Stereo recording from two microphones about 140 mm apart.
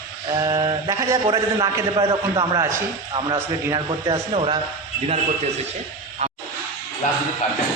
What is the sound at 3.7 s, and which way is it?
Speech, 35° right (ahead or behind).